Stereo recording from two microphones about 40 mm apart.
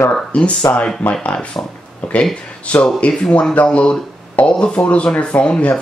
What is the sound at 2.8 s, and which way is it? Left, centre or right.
Speech, left.